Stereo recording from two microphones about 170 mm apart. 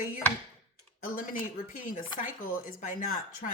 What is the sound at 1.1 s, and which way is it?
Speech, 55° left (ahead or behind).